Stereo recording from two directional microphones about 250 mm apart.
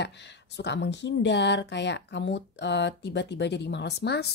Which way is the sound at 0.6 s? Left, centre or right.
Left.